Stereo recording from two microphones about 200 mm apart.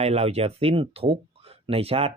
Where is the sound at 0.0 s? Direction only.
30° right (ahead or behind).